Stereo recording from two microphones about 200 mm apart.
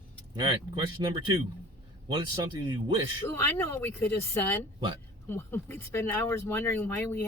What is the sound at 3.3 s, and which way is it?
Speech, 10° left (ahead or behind).